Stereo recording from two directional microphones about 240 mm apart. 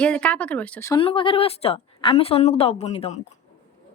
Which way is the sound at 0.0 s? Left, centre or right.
Centre.